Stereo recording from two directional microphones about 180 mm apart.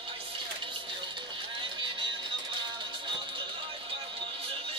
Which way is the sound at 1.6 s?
25° right (ahead or behind).